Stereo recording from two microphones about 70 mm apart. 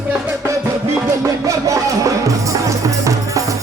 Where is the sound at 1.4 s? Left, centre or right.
Right.